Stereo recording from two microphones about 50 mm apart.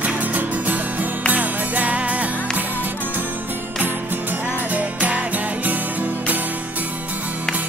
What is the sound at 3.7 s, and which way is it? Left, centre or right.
Music, right.